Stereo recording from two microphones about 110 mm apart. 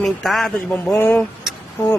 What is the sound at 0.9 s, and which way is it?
Speech, 20° left (ahead or behind).